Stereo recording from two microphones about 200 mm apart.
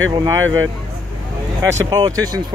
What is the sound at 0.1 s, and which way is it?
Speech, 15° right (ahead or behind).